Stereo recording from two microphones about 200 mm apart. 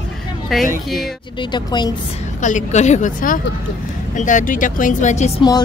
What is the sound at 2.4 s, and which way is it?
Speech, 35° left (ahead or behind).